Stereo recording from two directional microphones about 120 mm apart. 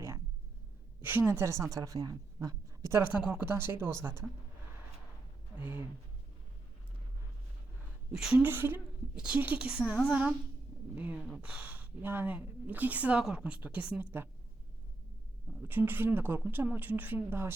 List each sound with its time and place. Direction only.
1.0 s a woman's voice: 15° right (ahead or behind)
5.5 s speech: 15° right (ahead or behind)
8.1 s a woman's voice: 5° right (ahead or behind)
8.4 s speech: 15° right (ahead or behind)
15.6 s speech: 15° right (ahead or behind)